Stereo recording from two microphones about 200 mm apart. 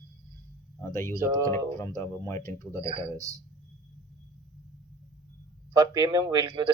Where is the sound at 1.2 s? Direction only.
15° right (ahead or behind).